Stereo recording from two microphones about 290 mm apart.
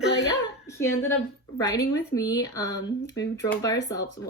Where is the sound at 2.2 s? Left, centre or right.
Centre.